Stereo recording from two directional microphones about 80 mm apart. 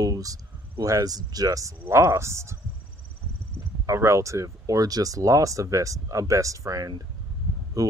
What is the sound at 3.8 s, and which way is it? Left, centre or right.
Speech, right.